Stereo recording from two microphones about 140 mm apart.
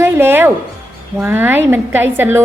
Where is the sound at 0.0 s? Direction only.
15° right (ahead or behind).